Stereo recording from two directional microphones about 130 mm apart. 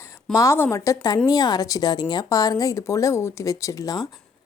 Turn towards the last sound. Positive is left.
turn(degrees=25)  # may be behind; listen again after turning